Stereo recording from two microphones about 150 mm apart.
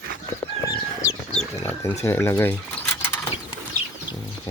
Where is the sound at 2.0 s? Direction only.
15° left (ahead or behind).